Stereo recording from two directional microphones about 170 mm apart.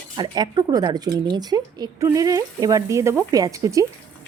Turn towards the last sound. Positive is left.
turn(degrees=-20)  # may be behind; listen again after turning